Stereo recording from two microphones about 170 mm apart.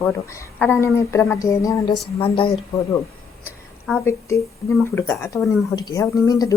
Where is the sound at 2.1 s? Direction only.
30° left (ahead or behind).